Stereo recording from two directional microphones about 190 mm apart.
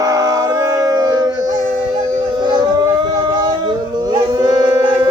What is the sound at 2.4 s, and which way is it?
Howl, 25° right (ahead or behind).